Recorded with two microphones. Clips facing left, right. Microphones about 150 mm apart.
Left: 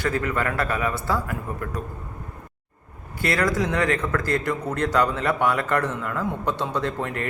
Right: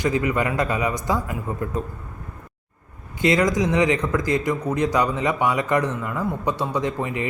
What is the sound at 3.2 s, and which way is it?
A man's voice, 20° right (ahead or behind).